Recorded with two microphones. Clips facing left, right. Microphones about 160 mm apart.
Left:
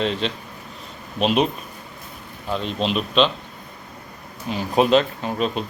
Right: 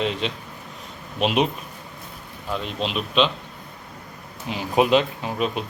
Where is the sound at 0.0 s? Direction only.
10° right (ahead or behind).